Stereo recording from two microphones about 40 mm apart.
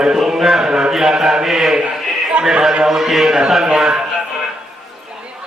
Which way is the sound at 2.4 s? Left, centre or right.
Right.